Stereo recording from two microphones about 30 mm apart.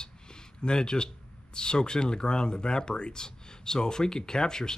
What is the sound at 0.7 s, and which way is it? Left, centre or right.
Speech, left.